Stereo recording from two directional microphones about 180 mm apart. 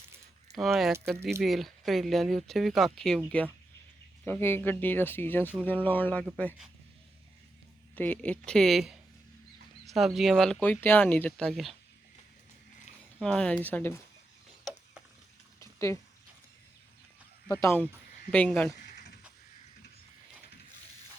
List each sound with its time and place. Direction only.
0.5 s speech: centre (ahead or behind)
4.3 s speech: 10° left (ahead or behind)
7.9 s speech: 10° left (ahead or behind)
13.1 s speech: 5° left (ahead or behind)
15.6 s a sound: 15° left (ahead or behind)
17.5 s speech: 15° left (ahead or behind)